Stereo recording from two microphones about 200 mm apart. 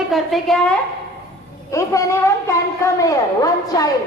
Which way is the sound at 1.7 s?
15° left (ahead or behind).